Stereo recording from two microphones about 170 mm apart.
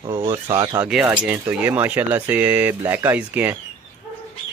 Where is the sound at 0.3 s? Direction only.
25° right (ahead or behind).